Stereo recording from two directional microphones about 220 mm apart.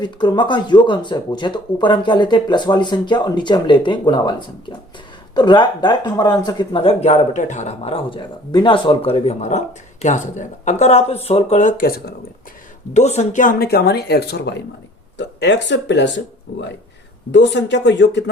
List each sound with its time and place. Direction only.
0.0 s speech: 20° left (ahead or behind); by 12.1 s 40° left (ahead or behind)
12.9 s speech: 30° left (ahead or behind); by 18.3 s 55° left (ahead or behind)